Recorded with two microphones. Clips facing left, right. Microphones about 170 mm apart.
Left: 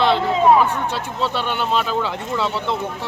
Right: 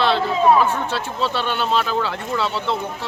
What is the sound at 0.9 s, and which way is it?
Speech, 15° left (ahead or behind).